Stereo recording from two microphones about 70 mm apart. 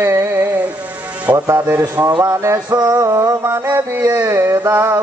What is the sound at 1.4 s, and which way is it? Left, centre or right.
Mantra, right.